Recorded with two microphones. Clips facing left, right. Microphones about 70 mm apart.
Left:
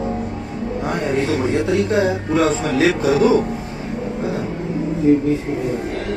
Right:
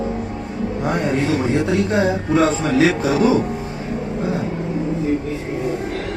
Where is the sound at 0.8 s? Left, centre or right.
Centre.